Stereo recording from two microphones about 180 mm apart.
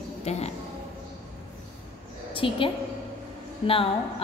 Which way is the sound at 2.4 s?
30° left (ahead or behind).